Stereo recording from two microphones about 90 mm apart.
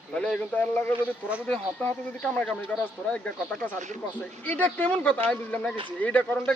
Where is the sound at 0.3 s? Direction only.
20° left (ahead or behind).